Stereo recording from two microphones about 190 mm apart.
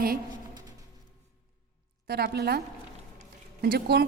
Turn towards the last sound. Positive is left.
turn(degrees=-55)  # may be behind; listen again after turning